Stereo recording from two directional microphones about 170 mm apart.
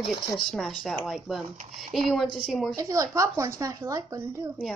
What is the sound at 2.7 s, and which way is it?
Speech, 20° right (ahead or behind).